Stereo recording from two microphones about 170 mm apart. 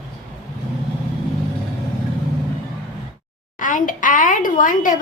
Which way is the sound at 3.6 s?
50° left (ahead or behind).